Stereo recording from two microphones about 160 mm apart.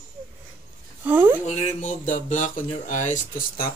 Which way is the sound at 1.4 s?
40° left (ahead or behind).